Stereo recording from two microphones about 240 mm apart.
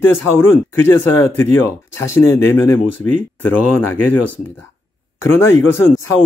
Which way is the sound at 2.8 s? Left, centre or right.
Left.